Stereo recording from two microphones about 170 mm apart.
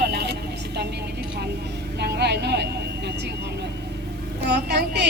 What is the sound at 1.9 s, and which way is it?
Speech, 75° right (ahead or behind).